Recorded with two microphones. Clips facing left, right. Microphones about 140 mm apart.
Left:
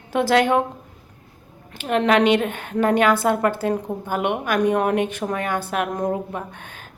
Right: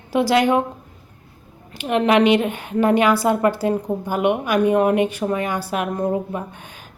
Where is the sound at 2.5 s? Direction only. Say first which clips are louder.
Right 3 dB; 50° left (ahead or behind).